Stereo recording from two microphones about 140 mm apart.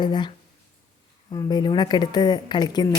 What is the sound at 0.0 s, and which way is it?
Speech, 30° left (ahead or behind).